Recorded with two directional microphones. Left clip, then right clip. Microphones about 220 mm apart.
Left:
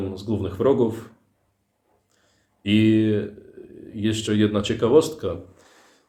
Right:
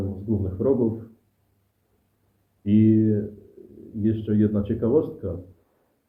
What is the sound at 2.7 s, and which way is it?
Speech, 20° left (ahead or behind).